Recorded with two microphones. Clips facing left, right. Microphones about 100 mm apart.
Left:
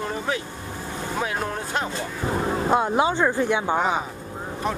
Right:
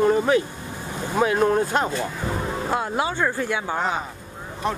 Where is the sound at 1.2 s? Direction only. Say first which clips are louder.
Right 8 dB; 45° right (ahead or behind).